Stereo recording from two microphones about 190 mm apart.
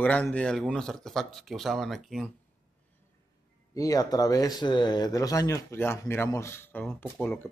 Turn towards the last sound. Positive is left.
turn(degrees=10)  # may be behind; listen again after turning